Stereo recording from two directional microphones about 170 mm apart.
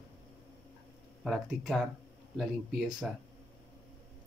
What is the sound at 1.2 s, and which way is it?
Speech, centre (ahead or behind).